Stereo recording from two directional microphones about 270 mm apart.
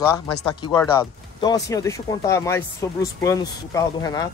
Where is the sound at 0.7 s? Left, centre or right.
Centre.